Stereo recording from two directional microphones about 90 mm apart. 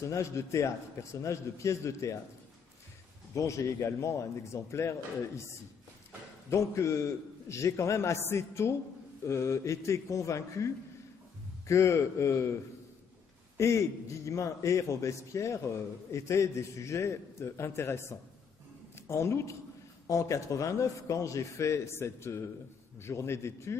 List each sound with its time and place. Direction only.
0.0 s a man's voice: 35° left (ahead or behind)
3.3 s a man's voice: 35° left (ahead or behind)
13.6 s a man's voice: 35° left (ahead or behind)